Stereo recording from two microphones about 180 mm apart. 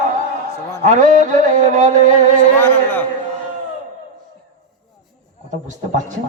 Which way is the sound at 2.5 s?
10° left (ahead or behind).